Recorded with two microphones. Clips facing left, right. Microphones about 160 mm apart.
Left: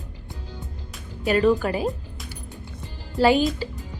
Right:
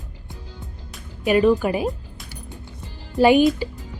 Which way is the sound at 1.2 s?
15° right (ahead or behind).